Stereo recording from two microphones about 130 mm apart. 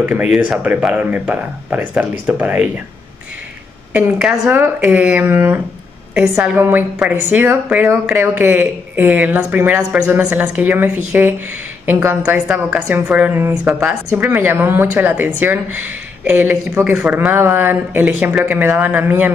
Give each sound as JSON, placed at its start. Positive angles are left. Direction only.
{"t": 0.0, "sound": "speech", "side_deg": -10}
{"t": 3.9, "sound": "speech", "side_deg": -10}